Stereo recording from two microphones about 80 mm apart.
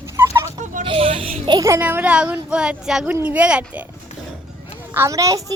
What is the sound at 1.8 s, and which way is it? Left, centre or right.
A child's voice, right.